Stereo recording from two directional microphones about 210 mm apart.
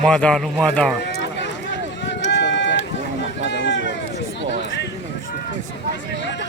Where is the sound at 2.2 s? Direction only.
55° left (ahead or behind).